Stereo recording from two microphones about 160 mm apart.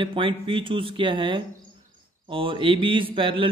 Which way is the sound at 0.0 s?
30° right (ahead or behind).